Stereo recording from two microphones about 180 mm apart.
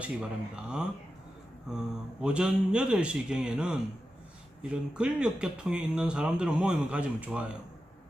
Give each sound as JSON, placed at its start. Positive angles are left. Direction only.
{"t": 0.0, "sound": "speech", "side_deg": -5}
{"t": 2.2, "sound": "speech", "side_deg": -5}